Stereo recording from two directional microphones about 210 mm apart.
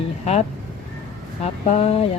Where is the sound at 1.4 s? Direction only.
30° left (ahead or behind).